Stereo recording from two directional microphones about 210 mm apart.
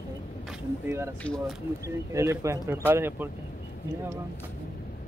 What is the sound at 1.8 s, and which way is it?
Speech, 15° right (ahead or behind).